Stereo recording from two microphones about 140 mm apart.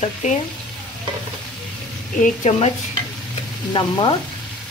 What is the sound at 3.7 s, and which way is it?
Speech, 35° left (ahead or behind).